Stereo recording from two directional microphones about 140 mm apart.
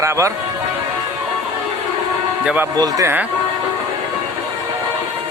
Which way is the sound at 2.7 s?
25° right (ahead or behind).